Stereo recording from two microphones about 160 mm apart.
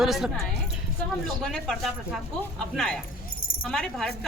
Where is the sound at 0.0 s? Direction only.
Centre (ahead or behind).